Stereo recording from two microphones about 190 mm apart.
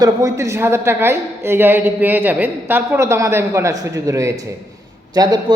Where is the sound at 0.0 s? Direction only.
15° right (ahead or behind).